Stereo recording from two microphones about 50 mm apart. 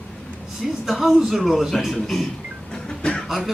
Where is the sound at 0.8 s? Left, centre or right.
Centre.